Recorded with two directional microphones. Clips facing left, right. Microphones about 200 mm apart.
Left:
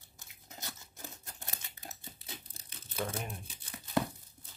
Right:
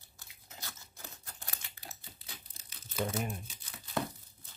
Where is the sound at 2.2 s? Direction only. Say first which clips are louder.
Left 5 dB; 25° left (ahead or behind).